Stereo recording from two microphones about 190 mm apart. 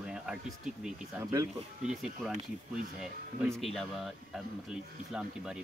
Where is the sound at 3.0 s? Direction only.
Centre (ahead or behind).